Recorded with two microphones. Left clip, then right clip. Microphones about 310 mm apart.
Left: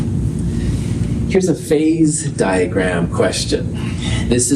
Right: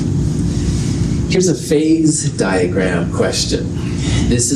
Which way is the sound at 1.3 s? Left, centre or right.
Left.